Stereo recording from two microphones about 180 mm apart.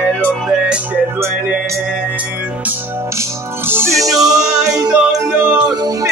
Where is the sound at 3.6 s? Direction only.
15° right (ahead or behind).